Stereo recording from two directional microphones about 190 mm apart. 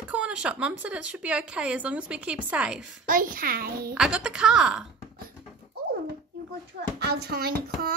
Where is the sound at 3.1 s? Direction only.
45° right (ahead or behind).